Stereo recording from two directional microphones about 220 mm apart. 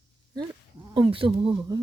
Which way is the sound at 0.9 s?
25° right (ahead or behind).